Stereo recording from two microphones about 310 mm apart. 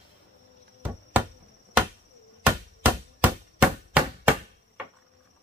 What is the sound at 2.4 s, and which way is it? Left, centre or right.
Chop, centre.